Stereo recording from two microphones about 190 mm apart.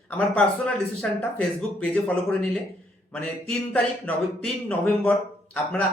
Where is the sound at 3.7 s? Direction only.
5° left (ahead or behind).